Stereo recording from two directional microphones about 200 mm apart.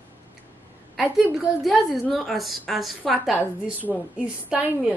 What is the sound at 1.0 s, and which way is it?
A woman's voice, 5° left (ahead or behind).